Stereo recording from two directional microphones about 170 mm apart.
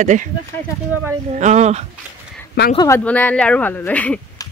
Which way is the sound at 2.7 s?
15° left (ahead or behind).